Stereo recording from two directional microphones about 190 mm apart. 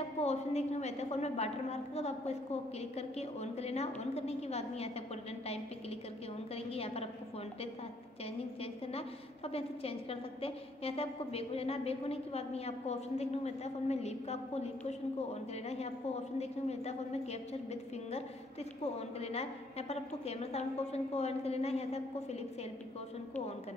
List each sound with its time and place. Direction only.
0.2 s a woman's voice: 35° left (ahead or behind)
6.5 s a woman's voice: 30° left (ahead or behind)
8.8 s a woman's voice: 30° left (ahead or behind)
16.3 s a woman's voice: 35° left (ahead or behind)
18.9 s a woman's voice: 35° left (ahead or behind)